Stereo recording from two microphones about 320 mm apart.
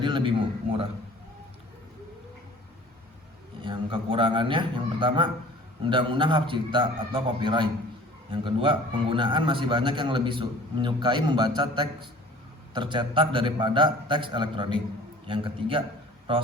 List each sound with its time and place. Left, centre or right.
0.0 s a man's voice: centre
3.6 s a man's voice: centre